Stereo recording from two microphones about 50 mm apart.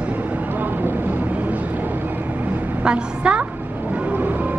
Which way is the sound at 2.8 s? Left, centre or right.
Right.